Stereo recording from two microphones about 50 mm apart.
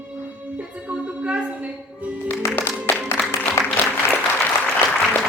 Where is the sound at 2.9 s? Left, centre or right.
Left.